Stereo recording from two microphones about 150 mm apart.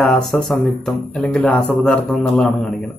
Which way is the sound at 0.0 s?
Centre (ahead or behind).